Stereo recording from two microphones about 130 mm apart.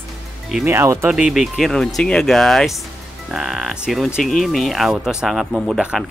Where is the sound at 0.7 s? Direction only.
20° right (ahead or behind).